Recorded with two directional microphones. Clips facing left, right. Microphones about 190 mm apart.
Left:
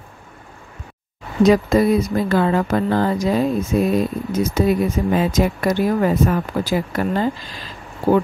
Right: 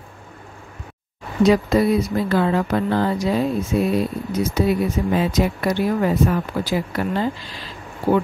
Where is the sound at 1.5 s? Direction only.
45° left (ahead or behind).